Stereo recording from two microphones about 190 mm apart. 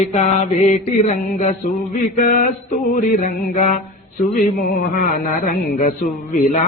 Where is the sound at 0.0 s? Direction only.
40° left (ahead or behind).